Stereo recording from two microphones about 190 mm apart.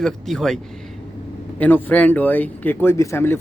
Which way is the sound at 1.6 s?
10° left (ahead or behind).